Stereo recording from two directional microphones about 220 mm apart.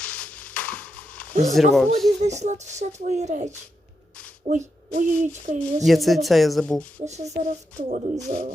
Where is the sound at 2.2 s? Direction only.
30° right (ahead or behind).